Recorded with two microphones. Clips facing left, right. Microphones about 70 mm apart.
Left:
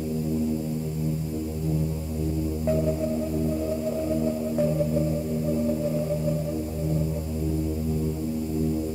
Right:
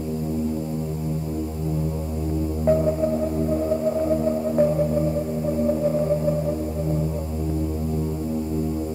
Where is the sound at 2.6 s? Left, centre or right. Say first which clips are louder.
Right 6 dB; right.